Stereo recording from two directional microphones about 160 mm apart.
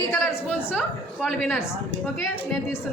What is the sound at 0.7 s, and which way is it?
Speech, 5° right (ahead or behind).